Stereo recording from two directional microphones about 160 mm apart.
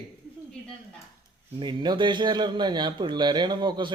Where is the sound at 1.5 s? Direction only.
30° right (ahead or behind).